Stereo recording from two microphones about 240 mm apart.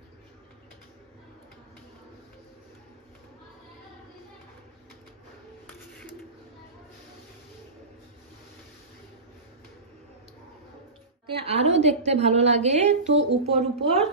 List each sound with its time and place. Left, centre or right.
11.4 s a woman's voice: right